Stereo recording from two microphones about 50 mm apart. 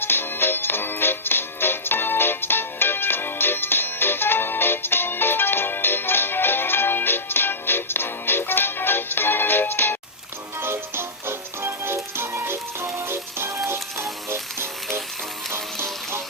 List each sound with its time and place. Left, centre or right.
0.0 s music: left
10.6 s music: right
15.5 s music: right